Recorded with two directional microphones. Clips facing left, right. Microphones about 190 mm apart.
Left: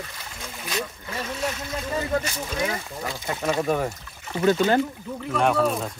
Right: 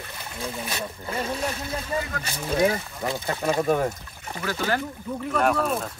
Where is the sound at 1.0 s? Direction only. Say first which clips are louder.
Right 1 dB; 30° right (ahead or behind).